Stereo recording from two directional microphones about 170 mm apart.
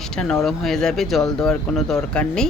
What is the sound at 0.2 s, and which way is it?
Speech, centre (ahead or behind).